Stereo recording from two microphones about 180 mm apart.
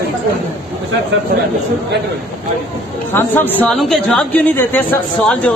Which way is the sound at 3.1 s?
10° left (ahead or behind).